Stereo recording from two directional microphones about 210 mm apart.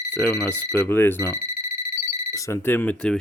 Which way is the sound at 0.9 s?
10° left (ahead or behind).